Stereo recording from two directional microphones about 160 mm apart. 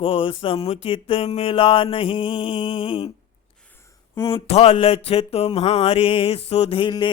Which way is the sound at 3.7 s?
15° left (ahead or behind).